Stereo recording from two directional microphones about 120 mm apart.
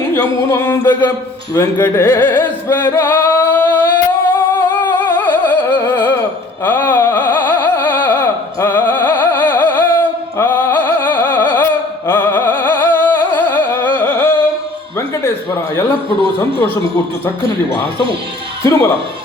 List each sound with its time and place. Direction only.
0.2 s a sound: 20° left (ahead or behind)
1.5 s singing: 20° left (ahead or behind)
6.7 s music: 20° left (ahead or behind)
18.6 s speech: 25° left (ahead or behind)